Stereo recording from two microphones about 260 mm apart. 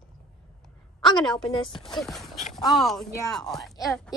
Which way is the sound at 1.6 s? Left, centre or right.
Centre.